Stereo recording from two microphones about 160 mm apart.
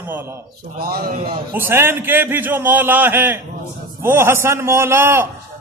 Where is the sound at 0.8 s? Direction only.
70° right (ahead or behind).